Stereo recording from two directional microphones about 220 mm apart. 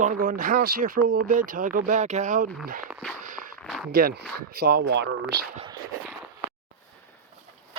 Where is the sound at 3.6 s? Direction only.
5° left (ahead or behind).